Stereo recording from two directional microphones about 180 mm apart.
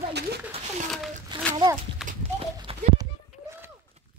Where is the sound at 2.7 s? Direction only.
30° right (ahead or behind).